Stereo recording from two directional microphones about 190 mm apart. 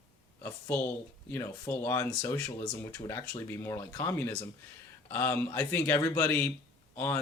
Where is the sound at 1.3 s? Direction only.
15° left (ahead or behind).